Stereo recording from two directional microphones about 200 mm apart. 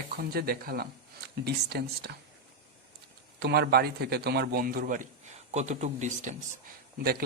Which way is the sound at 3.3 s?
55° right (ahead or behind).